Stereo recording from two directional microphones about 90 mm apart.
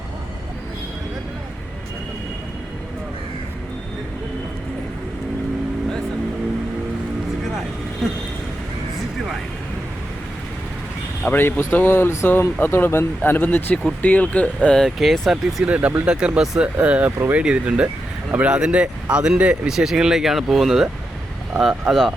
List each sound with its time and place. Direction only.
8.0 s vehicle: centre (ahead or behind)
11.3 s speech: 20° left (ahead or behind)
14.8 s speech: centre (ahead or behind)
15.6 s speech: 15° right (ahead or behind)
17.2 s speech: 25° right (ahead or behind)
17.4 s speech: 10° right (ahead or behind)